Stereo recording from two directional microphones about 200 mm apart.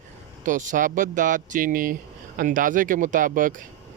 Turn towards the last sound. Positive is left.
turn(degrees=-40)  # may be behind; listen again after turning